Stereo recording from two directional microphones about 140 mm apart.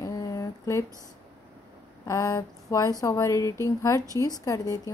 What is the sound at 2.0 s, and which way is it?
A woman's voice, 25° left (ahead or behind).